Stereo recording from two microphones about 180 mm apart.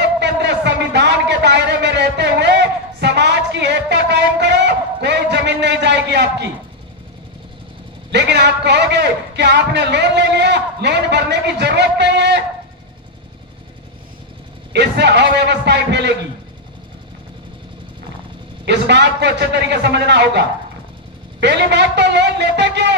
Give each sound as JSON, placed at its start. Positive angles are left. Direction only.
{"t": 0.0, "sound": "a sound", "side_deg": -70}
{"t": 8.1, "sound": "a man's voice", "side_deg": -70}
{"t": 14.7, "sound": "a man's voice", "side_deg": -70}
{"t": 18.7, "sound": "a man's voice", "side_deg": -75}